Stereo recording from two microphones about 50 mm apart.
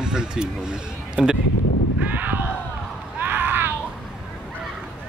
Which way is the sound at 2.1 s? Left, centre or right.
Right.